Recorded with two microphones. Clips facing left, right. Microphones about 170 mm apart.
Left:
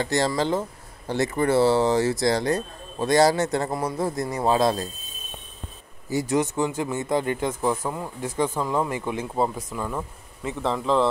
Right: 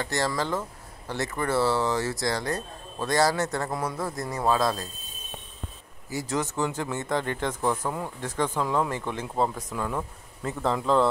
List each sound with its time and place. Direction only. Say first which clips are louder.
0.0 s speech: left 5 dB; 25° left (ahead or behind)
6.0 s speech: left 6 dB; 20° left (ahead or behind); by 11.1 s centre (ahead or behind)